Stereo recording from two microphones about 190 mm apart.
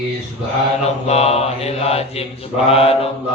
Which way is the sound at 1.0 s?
35° left (ahead or behind).